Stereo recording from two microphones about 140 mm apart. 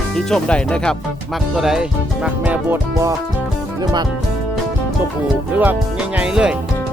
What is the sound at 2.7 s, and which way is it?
Speech, 25° right (ahead or behind).